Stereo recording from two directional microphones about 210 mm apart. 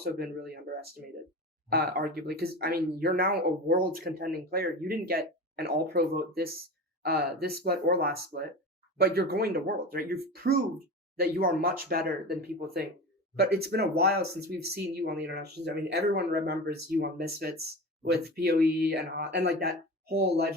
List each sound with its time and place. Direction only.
0.0 s speech: 45° right (ahead or behind)